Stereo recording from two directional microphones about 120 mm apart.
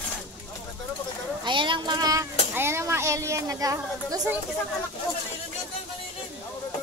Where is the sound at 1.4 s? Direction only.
40° right (ahead or behind).